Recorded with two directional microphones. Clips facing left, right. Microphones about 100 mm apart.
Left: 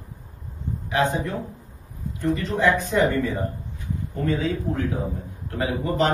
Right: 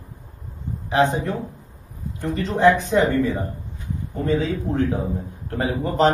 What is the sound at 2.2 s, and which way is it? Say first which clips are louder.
A man's voice: right 2 dB; 20° right (ahead or behind).